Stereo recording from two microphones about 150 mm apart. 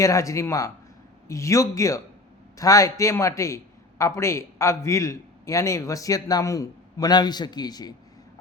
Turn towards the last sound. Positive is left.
turn(degrees=25)  # may be behind; listen again after turning